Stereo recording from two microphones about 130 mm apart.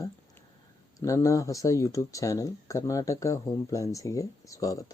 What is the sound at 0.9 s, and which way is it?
Speech, 25° left (ahead or behind).